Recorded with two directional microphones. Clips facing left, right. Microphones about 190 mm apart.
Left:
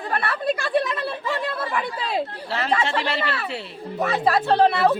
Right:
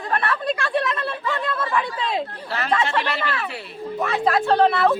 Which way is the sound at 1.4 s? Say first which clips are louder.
Right 2 dB; 10° left (ahead or behind).